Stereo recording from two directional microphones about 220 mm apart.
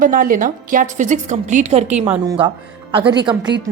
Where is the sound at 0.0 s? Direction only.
40° right (ahead or behind).